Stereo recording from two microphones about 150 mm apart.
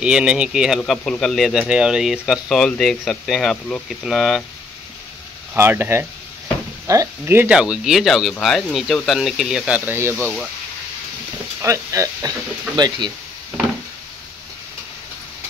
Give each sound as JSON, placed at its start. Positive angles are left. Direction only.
{"t": 0.0, "sound": "speech", "side_deg": -5}
{"t": 0.7, "sound": "speech", "side_deg": 5}
{"t": 5.5, "sound": "speech", "side_deg": -15}
{"t": 9.8, "sound": "speech", "side_deg": -15}
{"t": 11.6, "sound": "speech", "side_deg": -20}